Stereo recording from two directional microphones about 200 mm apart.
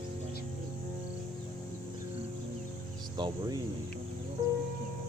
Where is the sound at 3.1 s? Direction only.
20° right (ahead or behind).